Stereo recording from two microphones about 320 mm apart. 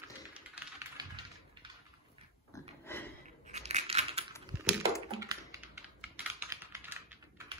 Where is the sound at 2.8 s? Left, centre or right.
Centre.